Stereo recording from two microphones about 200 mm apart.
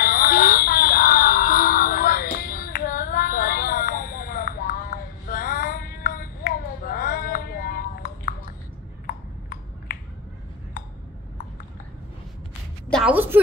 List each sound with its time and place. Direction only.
0.0 s music: 45° left (ahead or behind)
9.0 s a sound: 45° left (ahead or behind)
12.9 s music: 5° right (ahead or behind)